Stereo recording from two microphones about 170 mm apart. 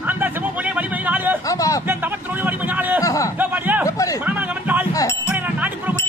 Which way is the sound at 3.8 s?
20° left (ahead or behind).